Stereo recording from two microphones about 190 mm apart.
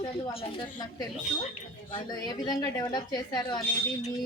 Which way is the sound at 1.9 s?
20° left (ahead or behind).